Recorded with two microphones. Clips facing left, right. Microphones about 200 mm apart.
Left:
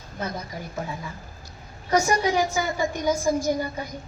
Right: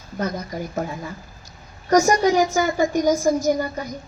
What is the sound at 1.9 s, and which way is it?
A woman's voice, 40° right (ahead or behind).